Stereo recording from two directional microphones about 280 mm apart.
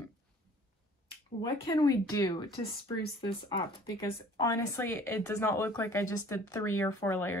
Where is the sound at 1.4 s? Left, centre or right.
Centre.